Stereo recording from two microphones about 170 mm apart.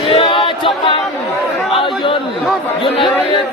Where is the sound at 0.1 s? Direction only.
35° left (ahead or behind).